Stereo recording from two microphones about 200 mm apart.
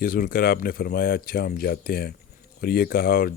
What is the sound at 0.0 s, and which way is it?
Speech, 45° left (ahead or behind).